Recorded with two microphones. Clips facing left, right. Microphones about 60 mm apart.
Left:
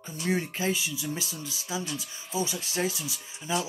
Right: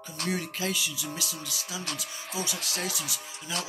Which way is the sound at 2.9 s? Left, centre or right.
Right.